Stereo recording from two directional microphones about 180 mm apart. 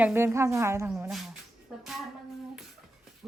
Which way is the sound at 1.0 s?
Centre (ahead or behind).